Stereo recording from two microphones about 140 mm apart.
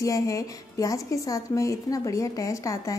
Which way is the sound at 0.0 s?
25° left (ahead or behind).